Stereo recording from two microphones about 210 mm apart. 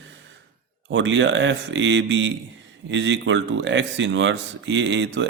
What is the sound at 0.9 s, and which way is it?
Speech, 60° right (ahead or behind).